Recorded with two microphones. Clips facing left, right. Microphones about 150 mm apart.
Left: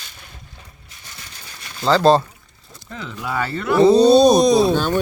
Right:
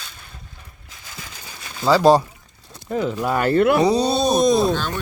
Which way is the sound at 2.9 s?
45° right (ahead or behind).